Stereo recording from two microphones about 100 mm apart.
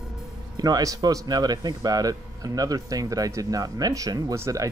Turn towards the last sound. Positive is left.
turn(degrees=-35)  # may be behind; listen again after turning